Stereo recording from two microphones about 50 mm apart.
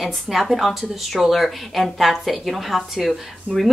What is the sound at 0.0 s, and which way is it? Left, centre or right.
A woman's voice, centre.